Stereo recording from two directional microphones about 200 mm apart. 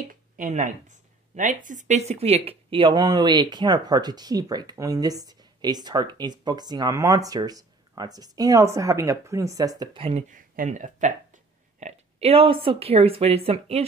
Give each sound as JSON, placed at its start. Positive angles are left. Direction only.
{"t": 0.1, "sound": "speech", "side_deg": -40}
{"t": 10.3, "sound": "speech", "side_deg": -40}